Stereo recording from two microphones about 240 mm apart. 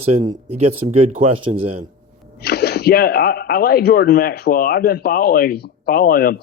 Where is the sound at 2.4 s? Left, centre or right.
Left.